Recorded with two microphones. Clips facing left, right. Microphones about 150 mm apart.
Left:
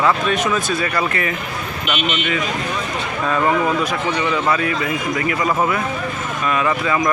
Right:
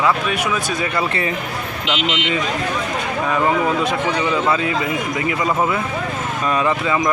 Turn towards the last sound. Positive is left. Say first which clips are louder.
# even
turn(degrees=-20)  # may be behind; listen again after turning